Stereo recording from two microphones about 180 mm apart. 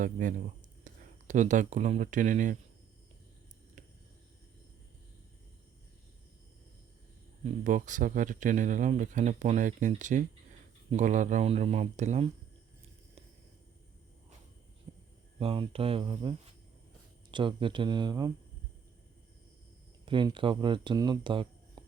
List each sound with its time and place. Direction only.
0.0 s speech: 45° right (ahead or behind)
7.4 s speech: 45° right (ahead or behind)
14.9 s hum: 40° right (ahead or behind)
15.4 s speech: 30° right (ahead or behind)
17.3 s speech: 25° right (ahead or behind)
20.1 s speech: 25° right (ahead or behind)